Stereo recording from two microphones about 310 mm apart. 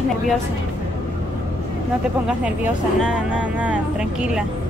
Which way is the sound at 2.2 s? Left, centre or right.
Centre.